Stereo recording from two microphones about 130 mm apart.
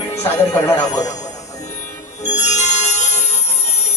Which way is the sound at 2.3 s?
65° left (ahead or behind).